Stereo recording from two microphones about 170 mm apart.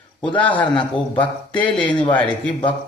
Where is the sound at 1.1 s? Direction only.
30° left (ahead or behind).